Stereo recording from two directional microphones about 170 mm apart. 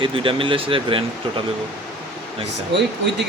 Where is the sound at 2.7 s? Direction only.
90° right.